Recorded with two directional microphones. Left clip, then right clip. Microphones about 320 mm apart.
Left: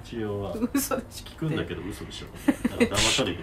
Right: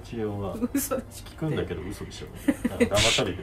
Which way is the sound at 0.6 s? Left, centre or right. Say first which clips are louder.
Left 1 dB; centre.